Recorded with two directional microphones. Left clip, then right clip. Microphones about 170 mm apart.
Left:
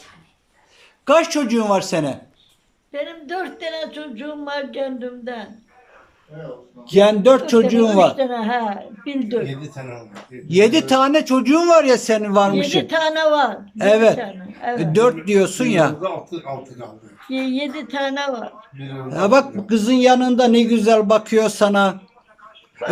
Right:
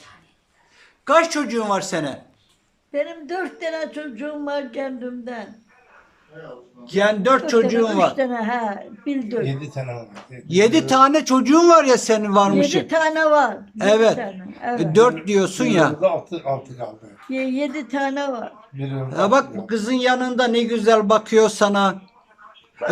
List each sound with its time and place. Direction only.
1.0 s speech: 10° left (ahead or behind)
2.9 s a man's voice: 5° right (ahead or behind)
6.8 s speech: 15° left (ahead or behind)
8.1 s a man's voice: centre (ahead or behind)
10.5 s a man's voice: 5° left (ahead or behind)
17.2 s a man's voice: 5° right (ahead or behind)